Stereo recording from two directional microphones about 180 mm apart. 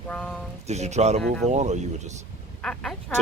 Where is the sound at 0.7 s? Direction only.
40° right (ahead or behind).